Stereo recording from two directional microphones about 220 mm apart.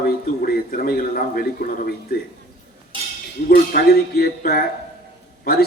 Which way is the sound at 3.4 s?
45° left (ahead or behind).